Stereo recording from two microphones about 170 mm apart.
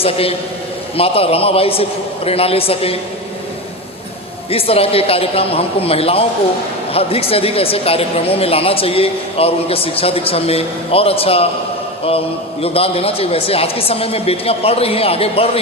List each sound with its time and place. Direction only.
0.0 s speech: 35° left (ahead or behind)
4.5 s speech: 35° left (ahead or behind)
12.6 s speech: 35° left (ahead or behind)